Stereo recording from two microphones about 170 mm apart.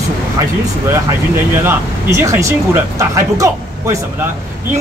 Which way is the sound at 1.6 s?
15° right (ahead or behind).